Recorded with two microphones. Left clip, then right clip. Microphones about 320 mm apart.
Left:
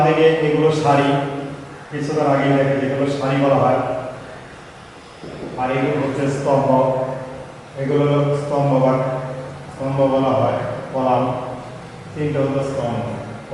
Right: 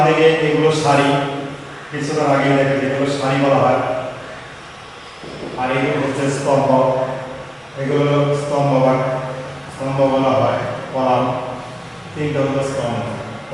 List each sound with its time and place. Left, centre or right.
0.0 s a man's voice: centre
5.5 s a man's voice: centre
12.4 s a man's voice: centre